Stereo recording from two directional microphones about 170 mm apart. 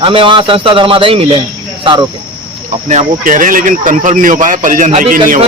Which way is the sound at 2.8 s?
50° right (ahead or behind).